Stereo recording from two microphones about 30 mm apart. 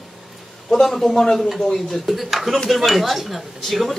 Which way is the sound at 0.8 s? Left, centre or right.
Centre.